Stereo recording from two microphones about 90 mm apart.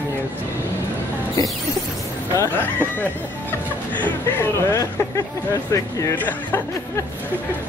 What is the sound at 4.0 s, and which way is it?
Speech, 25° left (ahead or behind).